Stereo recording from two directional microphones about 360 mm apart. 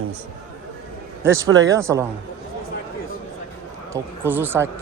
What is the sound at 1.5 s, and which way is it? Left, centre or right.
Speech, right.